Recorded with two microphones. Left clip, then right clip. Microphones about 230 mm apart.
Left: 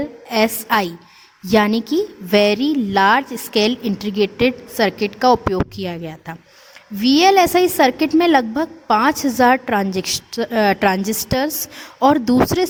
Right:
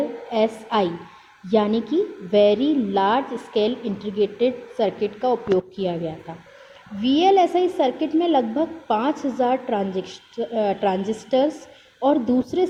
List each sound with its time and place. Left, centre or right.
0.3 s a woman's voice: left